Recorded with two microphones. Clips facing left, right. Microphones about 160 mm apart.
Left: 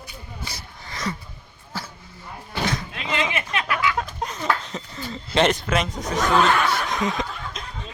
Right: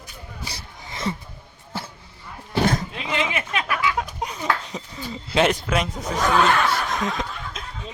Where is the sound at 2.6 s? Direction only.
50° right (ahead or behind).